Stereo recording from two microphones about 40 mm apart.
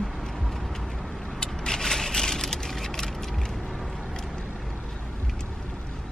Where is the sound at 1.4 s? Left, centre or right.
Centre.